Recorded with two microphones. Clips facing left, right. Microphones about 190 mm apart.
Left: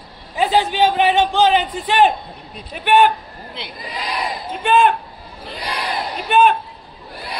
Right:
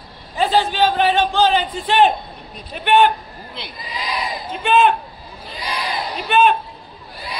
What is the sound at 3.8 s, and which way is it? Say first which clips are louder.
Speech: left 1 dB; 55° left (ahead or behind).